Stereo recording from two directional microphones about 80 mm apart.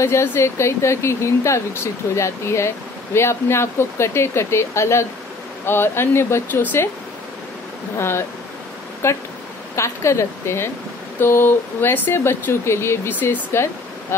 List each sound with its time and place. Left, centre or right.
0.0 s speech: left
8.0 s speech: left